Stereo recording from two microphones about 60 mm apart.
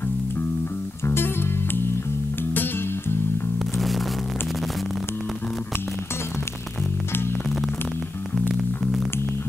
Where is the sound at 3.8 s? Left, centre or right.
Centre.